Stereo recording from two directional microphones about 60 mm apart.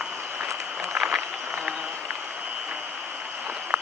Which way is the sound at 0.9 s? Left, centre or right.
Right.